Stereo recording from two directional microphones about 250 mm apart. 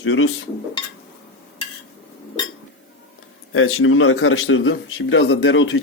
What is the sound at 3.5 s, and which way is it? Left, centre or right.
A man's voice, left.